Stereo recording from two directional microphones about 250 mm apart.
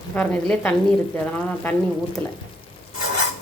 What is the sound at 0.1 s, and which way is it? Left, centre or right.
Speech, centre.